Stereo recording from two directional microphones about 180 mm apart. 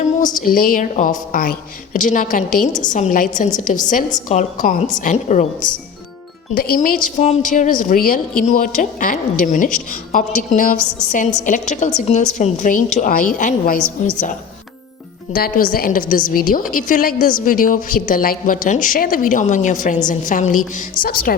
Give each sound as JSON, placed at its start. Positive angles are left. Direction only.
{"t": 0.3, "sound": "a woman's voice", "side_deg": 50}
{"t": 6.5, "sound": "a woman's voice", "side_deg": 55}